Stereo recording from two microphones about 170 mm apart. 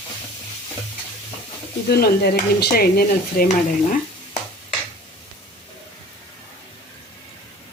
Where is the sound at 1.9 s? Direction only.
65° left (ahead or behind).